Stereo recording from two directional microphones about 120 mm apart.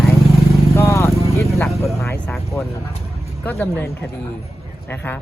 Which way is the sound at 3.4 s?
15° left (ahead or behind).